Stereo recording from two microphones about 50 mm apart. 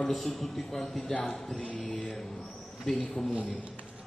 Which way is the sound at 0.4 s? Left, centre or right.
Centre.